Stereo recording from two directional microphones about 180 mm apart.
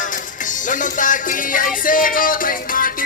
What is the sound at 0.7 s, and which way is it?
Music, 45° left (ahead or behind).